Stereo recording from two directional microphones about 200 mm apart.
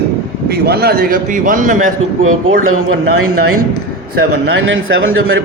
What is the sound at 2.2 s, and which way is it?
Speech, 90° right.